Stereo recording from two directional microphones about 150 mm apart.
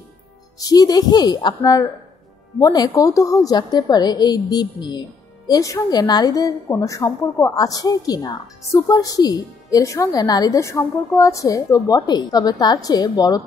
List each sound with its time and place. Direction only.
0.6 s a woman's voice: 25° left (ahead or behind)